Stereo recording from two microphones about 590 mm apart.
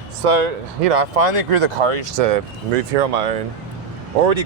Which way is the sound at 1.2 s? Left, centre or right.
Right.